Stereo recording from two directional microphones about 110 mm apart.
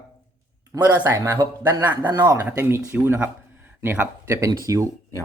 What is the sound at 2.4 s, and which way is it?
Speech, 20° right (ahead or behind).